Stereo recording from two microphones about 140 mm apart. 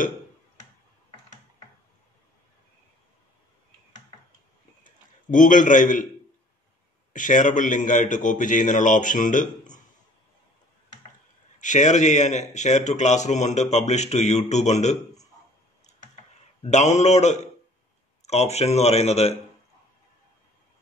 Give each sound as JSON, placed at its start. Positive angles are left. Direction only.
{"t": 4.8, "sound": "a sound", "side_deg": 70}
{"t": 7.1, "sound": "a man's voice", "side_deg": 65}
{"t": 11.6, "sound": "speech", "side_deg": 60}
{"t": 16.6, "sound": "speech", "side_deg": 55}